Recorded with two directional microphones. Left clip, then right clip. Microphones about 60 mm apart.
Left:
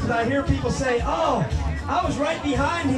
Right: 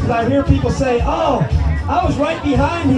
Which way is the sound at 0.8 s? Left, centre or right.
Centre.